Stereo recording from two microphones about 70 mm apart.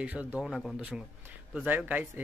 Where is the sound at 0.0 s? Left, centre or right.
Right.